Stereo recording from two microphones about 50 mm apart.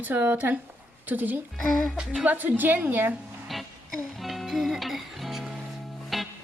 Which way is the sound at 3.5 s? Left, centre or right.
Centre.